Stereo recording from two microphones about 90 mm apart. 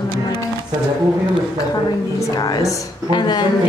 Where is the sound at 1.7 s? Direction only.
45° left (ahead or behind).